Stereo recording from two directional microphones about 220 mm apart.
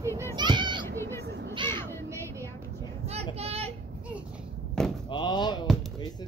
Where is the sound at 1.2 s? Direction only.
50° right (ahead or behind).